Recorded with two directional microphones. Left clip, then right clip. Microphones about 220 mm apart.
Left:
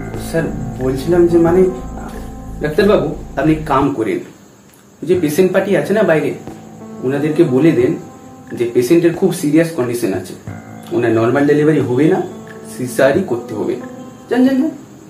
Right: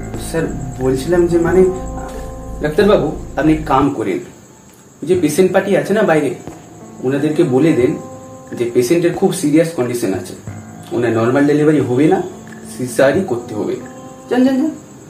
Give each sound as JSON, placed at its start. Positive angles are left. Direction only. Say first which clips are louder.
{"t": 0.8, "sound": "speech", "louder": "left 1 dB", "side_deg": 0}
{"t": 2.7, "sound": "speech", "louder": "even", "side_deg": 0}